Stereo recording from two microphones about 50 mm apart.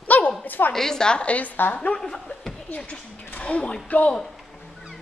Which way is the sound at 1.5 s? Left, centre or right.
Left.